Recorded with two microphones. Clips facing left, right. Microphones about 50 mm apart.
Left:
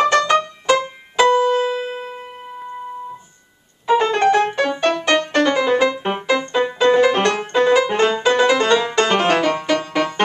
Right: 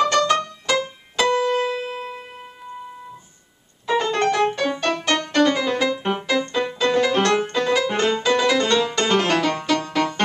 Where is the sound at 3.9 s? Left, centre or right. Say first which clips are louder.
Left 5 dB; centre.